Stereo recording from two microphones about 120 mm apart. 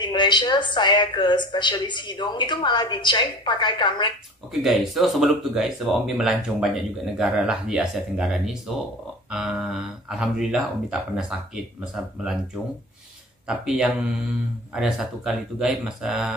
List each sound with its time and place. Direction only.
0.0 s a woman's voice: 40° left (ahead or behind)
4.5 s speech: centre (ahead or behind)
13.5 s speech: 5° right (ahead or behind)